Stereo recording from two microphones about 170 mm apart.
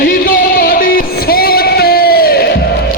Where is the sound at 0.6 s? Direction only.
60° left (ahead or behind).